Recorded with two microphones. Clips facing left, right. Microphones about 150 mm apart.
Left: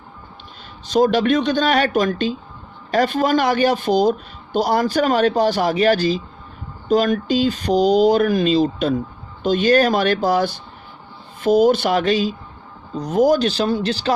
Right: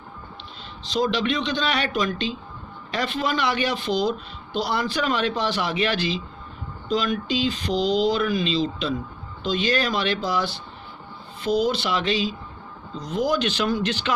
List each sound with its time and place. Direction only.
0.9 s speech: 45° left (ahead or behind)